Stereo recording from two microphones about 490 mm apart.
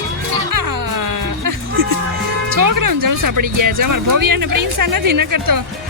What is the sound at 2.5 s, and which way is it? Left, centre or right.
Speech, right.